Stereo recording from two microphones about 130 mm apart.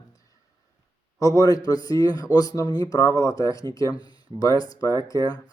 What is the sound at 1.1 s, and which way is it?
Speech, 25° left (ahead or behind).